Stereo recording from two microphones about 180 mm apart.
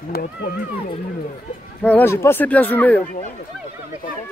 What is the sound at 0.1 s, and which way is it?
Speech, 55° left (ahead or behind).